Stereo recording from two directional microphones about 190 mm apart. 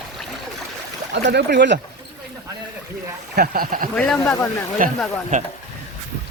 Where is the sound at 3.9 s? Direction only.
5° left (ahead or behind).